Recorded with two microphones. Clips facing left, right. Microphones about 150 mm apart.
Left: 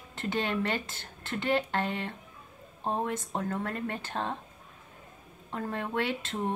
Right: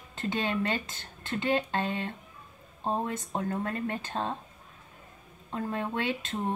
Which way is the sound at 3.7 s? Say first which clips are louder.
Right 2 dB; 15° right (ahead or behind).